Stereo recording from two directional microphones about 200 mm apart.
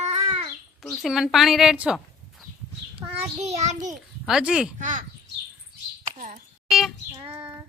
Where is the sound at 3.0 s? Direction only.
35° right (ahead or behind).